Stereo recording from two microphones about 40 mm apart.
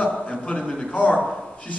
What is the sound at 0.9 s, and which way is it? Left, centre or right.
Speech, left.